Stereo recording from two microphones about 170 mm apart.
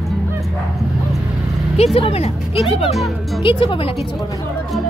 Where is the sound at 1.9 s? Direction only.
35° left (ahead or behind).